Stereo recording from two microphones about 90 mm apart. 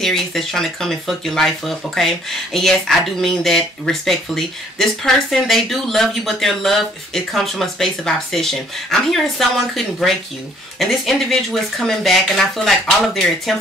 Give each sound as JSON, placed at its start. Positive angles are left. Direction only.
{"t": 0.0, "sound": "speech", "side_deg": 5}